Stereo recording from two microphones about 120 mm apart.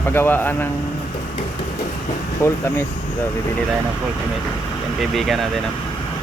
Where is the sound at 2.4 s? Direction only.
25° left (ahead or behind).